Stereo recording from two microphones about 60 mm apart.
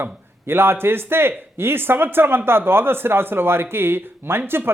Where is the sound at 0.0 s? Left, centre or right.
Right.